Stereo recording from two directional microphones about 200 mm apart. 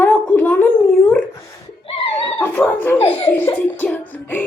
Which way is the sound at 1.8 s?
25° left (ahead or behind).